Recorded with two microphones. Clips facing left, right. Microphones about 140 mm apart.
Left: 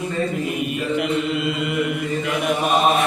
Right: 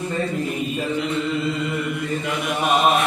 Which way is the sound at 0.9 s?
65° left (ahead or behind).